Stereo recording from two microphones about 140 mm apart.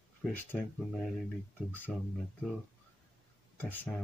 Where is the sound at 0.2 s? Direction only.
5° left (ahead or behind).